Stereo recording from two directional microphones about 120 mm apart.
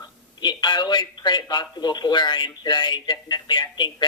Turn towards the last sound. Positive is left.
turn(degrees=40)  # may be behind; listen again after turning